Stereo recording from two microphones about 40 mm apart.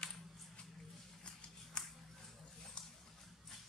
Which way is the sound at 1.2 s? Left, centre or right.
Left.